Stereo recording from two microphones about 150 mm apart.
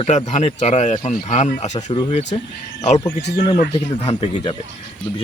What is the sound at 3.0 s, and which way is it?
Speech, 30° left (ahead or behind).